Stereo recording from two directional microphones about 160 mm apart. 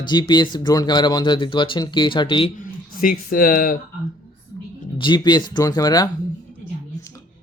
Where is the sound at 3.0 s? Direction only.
65° left (ahead or behind).